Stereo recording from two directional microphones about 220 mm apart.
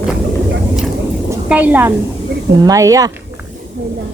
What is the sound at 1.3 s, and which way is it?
A woman's voice, 5° right (ahead or behind).